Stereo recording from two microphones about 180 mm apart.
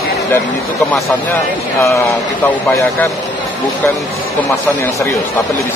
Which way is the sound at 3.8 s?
10° left (ahead or behind).